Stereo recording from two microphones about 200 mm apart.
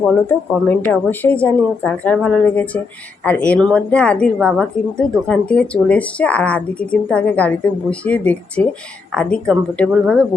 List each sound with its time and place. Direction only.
0.1 s a woman's voice: 10° left (ahead or behind)